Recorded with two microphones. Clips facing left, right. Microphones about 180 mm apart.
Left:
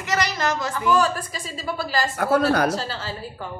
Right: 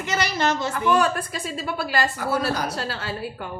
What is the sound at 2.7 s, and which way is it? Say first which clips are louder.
Speech: even; 60° right (ahead or behind).